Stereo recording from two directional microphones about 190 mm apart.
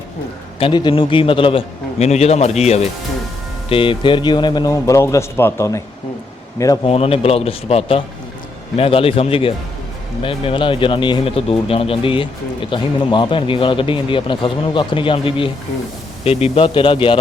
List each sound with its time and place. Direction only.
0.6 s a man's voice: 25° left (ahead or behind)
6.8 s a man's voice: 30° left (ahead or behind)